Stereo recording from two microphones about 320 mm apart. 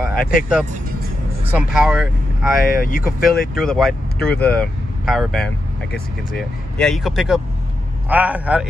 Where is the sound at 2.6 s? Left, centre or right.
Left.